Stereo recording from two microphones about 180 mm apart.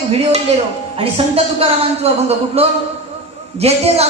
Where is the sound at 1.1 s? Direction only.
35° right (ahead or behind).